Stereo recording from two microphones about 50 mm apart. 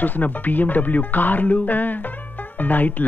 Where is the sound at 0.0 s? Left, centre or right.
Left.